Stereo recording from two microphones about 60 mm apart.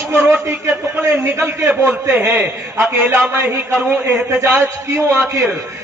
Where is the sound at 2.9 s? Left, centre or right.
Right.